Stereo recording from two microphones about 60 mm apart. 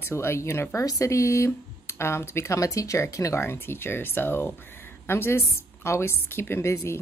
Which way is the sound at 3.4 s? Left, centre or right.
Left.